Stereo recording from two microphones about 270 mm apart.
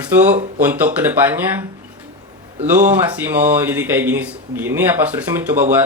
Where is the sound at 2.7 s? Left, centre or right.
Centre.